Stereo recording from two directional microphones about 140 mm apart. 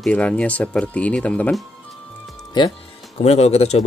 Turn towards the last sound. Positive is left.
turn(degrees=50)  # may be behind; listen again after turning